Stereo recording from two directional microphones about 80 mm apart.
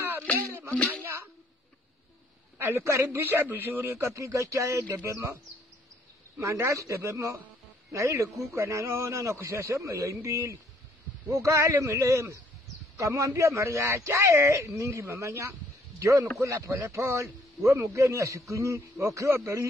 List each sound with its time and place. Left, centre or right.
1.0 s a sound: right
2.6 s a man's voice: right
6.4 s a man's voice: right